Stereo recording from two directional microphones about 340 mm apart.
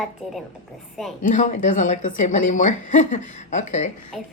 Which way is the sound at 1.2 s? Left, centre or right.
Left.